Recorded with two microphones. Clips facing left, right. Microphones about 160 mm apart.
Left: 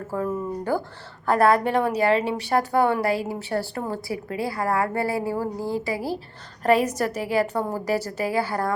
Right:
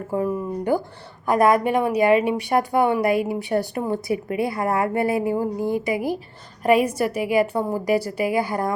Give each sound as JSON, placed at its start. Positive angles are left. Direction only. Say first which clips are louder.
{"t": 0.1, "sound": "a woman's voice", "louder": "right 3 dB", "side_deg": -15}